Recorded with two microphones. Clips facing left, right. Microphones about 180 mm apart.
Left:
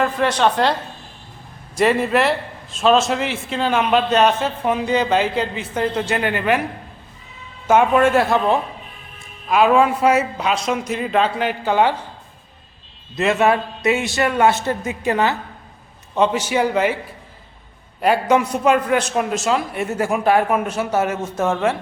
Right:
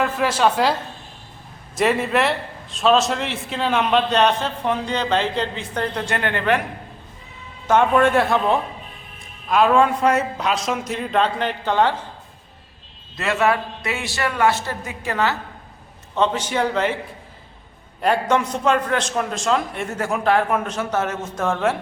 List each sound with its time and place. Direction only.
0.0 s a man's voice: 5° right (ahead or behind)
7.7 s a man's voice: 5° left (ahead or behind)
13.1 s a man's voice: 20° left (ahead or behind)
18.0 s a man's voice: 5° left (ahead or behind)